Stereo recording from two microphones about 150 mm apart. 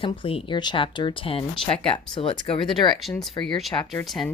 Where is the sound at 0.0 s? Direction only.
35° left (ahead or behind).